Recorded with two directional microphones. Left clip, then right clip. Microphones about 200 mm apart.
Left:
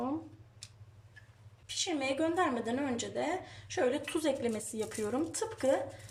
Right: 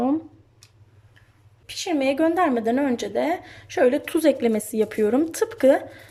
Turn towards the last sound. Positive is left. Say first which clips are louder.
# right 13 dB
turn(degrees=-45)  # may be behind; listen again after turning